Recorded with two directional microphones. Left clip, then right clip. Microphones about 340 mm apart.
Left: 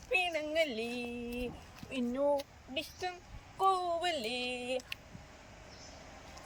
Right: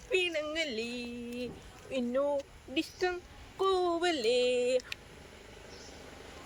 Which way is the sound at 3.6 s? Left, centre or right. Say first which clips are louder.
Right 1 dB; centre.